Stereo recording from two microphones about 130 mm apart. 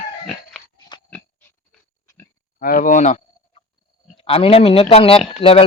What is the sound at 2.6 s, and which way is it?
Speech, 90° left.